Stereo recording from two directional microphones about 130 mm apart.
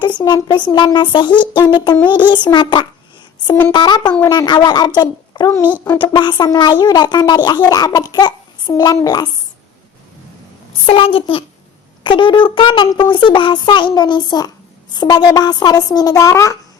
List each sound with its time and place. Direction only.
0.0 s a child's voice: 35° left (ahead or behind)
3.4 s a woman's voice: 20° left (ahead or behind)
3.7 s a child's voice: 35° left (ahead or behind)
10.8 s a child's voice: 45° left (ahead or behind); by 16.6 s 25° left (ahead or behind)